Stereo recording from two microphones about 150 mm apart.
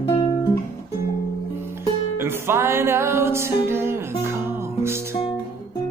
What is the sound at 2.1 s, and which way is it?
Music, 15° right (ahead or behind).